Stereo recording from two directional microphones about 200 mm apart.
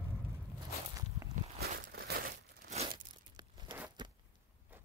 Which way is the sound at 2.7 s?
25° right (ahead or behind).